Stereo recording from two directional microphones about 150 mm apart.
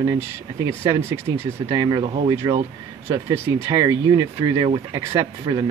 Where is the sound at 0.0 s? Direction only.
20° right (ahead or behind).